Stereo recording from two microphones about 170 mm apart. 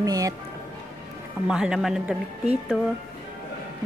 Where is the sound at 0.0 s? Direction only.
20° right (ahead or behind).